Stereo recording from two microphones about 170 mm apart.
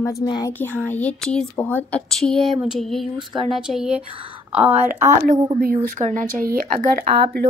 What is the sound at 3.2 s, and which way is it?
Speech, 30° right (ahead or behind).